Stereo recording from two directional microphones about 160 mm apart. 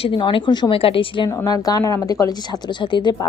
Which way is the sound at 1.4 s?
20° left (ahead or behind).